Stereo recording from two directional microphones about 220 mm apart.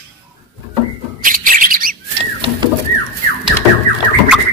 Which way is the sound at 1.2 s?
40° right (ahead or behind).